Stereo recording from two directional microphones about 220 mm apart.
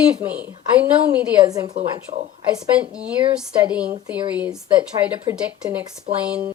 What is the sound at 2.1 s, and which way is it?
Speech, 25° right (ahead or behind).